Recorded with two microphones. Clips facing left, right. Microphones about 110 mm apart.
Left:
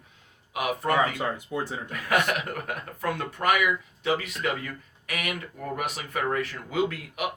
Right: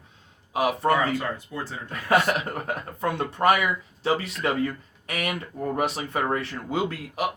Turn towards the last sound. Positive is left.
turn(degrees=-30)  # may be behind; listen again after turning